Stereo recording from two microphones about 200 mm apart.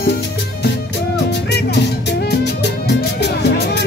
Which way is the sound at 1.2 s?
55° left (ahead or behind).